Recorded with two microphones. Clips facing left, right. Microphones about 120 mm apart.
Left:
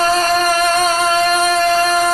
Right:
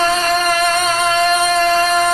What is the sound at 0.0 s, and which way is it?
Music, 40° left (ahead or behind).